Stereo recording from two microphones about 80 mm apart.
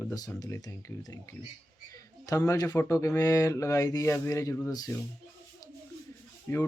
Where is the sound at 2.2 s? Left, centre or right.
Left.